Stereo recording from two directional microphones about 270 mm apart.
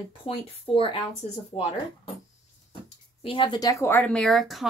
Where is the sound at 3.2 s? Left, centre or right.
Centre.